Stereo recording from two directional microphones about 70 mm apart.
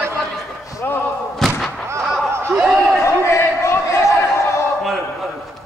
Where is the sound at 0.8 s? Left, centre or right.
Left.